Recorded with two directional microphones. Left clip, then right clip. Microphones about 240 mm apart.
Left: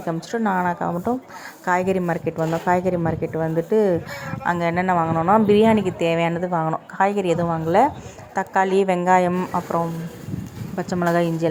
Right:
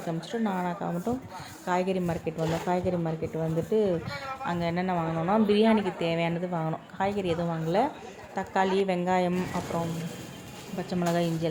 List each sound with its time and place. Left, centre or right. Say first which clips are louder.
0.1 s a woman's voice: left 9 dB; centre